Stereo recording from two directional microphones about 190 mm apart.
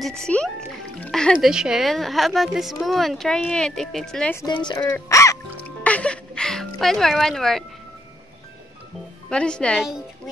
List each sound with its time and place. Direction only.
0.0 s speech: 5° left (ahead or behind)
4.5 s speech: 25° left (ahead or behind)
5.9 s music: 5° left (ahead or behind)
9.3 s speech: 5° left (ahead or behind)